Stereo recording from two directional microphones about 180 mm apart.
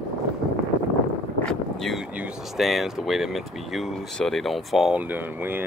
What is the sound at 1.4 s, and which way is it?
Speech, centre (ahead or behind).